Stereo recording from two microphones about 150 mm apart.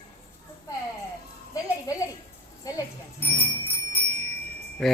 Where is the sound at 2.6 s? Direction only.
25° left (ahead or behind).